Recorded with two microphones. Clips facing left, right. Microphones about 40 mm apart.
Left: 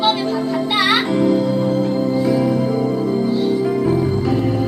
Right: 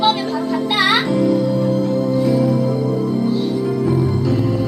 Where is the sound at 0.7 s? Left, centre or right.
Centre.